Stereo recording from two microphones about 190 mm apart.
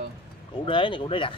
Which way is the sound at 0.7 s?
25° left (ahead or behind).